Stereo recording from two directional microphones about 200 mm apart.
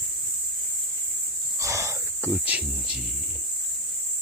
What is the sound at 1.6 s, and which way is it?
Wild animals, 15° right (ahead or behind).